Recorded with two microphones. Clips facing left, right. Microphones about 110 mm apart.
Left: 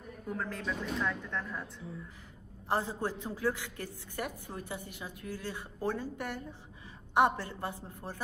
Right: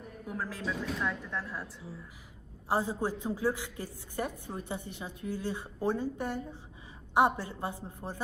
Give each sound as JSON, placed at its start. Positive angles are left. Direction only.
{"t": 0.3, "sound": "a woman's voice", "side_deg": -5}
{"t": 2.7, "sound": "a woman's voice", "side_deg": -15}